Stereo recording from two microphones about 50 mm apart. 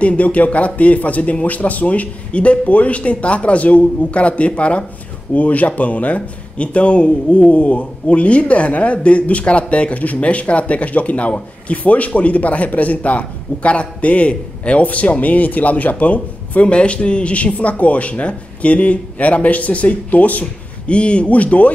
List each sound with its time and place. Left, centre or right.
0.0 s speech: left